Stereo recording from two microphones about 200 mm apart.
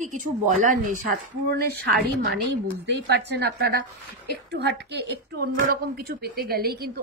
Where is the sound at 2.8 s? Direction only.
55° right (ahead or behind).